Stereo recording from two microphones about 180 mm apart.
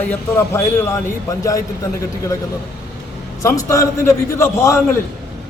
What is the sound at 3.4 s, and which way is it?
A man's voice, 15° left (ahead or behind).